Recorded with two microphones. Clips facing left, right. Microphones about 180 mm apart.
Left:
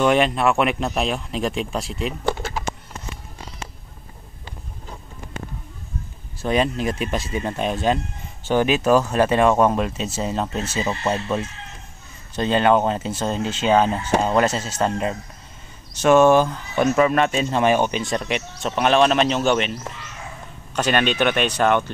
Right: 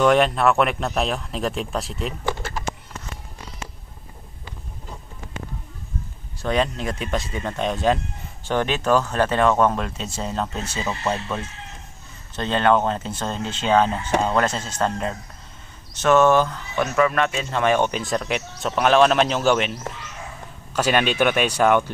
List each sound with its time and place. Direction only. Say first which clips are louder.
0.0 s speech: right 1 dB; centre (ahead or behind)
6.4 s speech: left 2 dB; 10° left (ahead or behind)
17.7 s speech: even; centre (ahead or behind)